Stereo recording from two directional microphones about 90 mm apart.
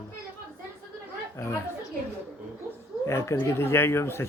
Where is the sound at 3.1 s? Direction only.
30° left (ahead or behind).